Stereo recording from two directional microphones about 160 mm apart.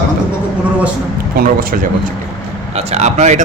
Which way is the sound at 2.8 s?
45° right (ahead or behind).